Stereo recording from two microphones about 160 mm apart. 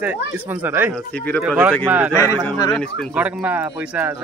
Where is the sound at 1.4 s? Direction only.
10° right (ahead or behind).